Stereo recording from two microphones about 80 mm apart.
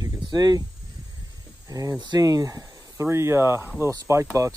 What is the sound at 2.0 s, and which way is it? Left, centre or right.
Speech, right.